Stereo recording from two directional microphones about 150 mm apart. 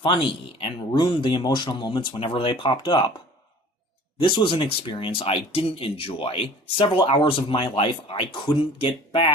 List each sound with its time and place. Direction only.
0.6 s speech: 30° left (ahead or behind)
4.2 s speech: 35° left (ahead or behind)